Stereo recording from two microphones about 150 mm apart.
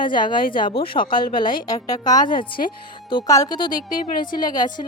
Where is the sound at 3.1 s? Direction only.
35° left (ahead or behind).